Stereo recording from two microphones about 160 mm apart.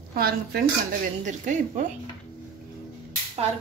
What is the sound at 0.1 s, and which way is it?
Speech, 70° right (ahead or behind).